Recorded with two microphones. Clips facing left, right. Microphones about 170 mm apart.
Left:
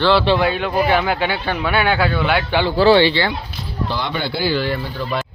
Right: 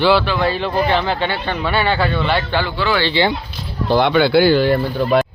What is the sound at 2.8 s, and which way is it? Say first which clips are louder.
Speech: left 10 dB; 35° left (ahead or behind).